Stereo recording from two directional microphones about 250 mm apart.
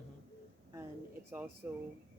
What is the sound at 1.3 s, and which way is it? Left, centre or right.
Speech, centre.